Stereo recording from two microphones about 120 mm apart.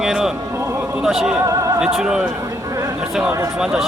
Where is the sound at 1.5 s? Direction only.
25° right (ahead or behind).